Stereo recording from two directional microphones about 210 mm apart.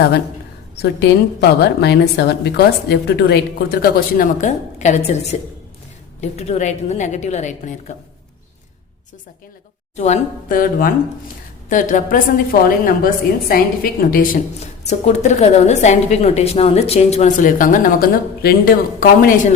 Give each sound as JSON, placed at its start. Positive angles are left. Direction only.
{"t": 0.8, "sound": "a woman's voice", "side_deg": 55}
{"t": 9.9, "sound": "a woman's voice", "side_deg": 35}